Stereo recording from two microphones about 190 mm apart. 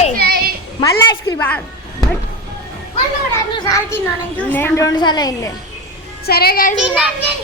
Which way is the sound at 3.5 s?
20° left (ahead or behind).